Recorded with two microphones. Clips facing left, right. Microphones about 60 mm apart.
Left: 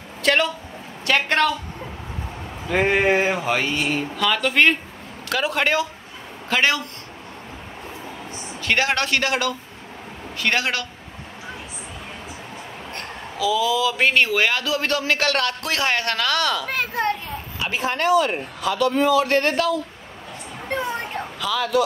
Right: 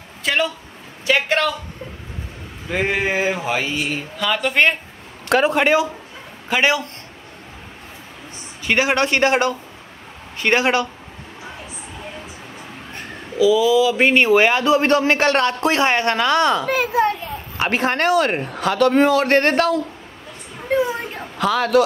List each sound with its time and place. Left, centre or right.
0.2 s speech: centre
2.7 s speech: centre
8.6 s speech: centre
13.4 s speech: centre
16.6 s speech: centre
17.6 s a man's voice: right
20.6 s speech: centre
21.4 s speech: right